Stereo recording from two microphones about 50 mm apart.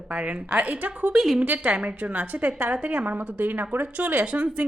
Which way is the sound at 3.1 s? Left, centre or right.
Right.